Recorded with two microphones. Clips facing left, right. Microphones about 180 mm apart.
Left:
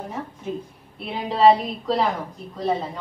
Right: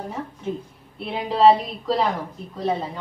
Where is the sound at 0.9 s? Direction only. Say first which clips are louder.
Right 2 dB; centre (ahead or behind).